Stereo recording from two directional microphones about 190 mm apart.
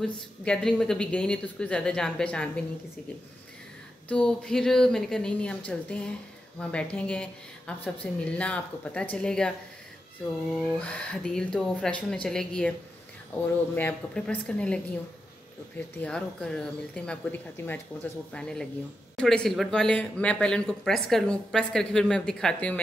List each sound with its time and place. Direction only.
0.0 s speech: 5° left (ahead or behind)
4.1 s speech: 5° left (ahead or behind)
10.6 s a woman's voice: 5° left (ahead or behind)
16.0 s speech: 5° left (ahead or behind)